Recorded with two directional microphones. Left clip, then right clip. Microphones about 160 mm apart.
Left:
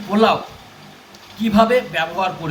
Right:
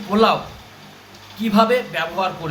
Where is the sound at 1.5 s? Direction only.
30° right (ahead or behind).